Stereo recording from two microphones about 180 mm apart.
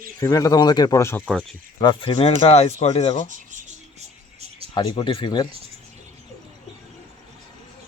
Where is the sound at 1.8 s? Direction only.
25° left (ahead or behind).